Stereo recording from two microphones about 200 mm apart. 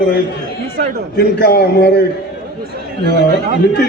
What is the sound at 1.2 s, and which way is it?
Speech, 50° left (ahead or behind).